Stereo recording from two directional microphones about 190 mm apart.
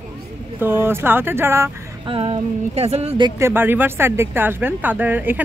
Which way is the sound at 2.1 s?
30° right (ahead or behind).